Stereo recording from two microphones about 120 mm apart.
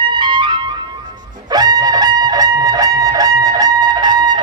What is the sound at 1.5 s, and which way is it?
Fowl, 35° right (ahead or behind).